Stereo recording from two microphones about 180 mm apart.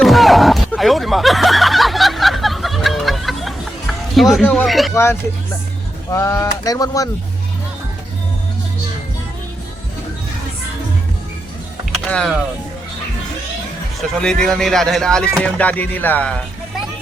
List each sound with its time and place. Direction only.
0.0 s a sound: centre (ahead or behind)
6.1 s speech: 15° left (ahead or behind)
11.9 s music: 5° left (ahead or behind)
14.2 s speech: 5° left (ahead or behind)
15.4 s music: 5° left (ahead or behind)